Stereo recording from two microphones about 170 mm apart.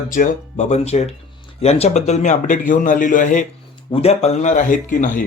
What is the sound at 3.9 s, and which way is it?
Speech, 35° left (ahead or behind).